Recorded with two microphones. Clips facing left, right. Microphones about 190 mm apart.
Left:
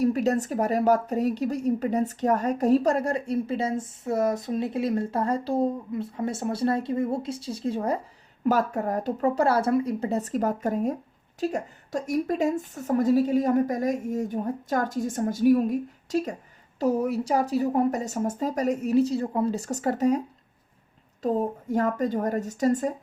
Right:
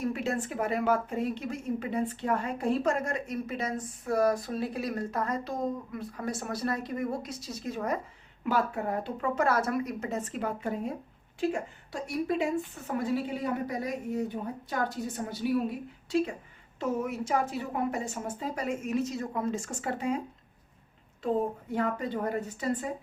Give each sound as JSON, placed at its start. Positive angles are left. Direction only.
{"t": 0.0, "sound": "a woman's voice", "side_deg": 40}
{"t": 8.4, "sound": "a woman's voice", "side_deg": 45}